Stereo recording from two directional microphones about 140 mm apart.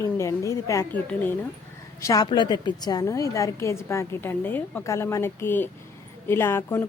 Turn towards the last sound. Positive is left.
turn(degrees=15)  # may be behind; listen again after turning